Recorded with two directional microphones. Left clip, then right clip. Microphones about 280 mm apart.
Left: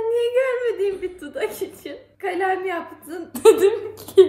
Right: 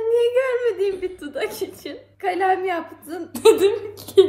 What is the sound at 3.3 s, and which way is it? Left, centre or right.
Speech, centre.